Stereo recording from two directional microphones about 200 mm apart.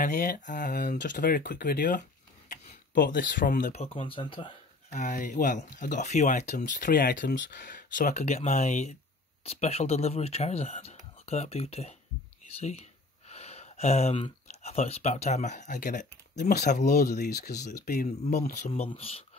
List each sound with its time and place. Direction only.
0.0 s speech: 40° left (ahead or behind); by 4.6 s 25° left (ahead or behind)
4.9 s speech: 40° left (ahead or behind); by 7.4 s 60° left (ahead or behind)
7.5 s speech: 40° left (ahead or behind)
18.0 s speech: 35° left (ahead or behind)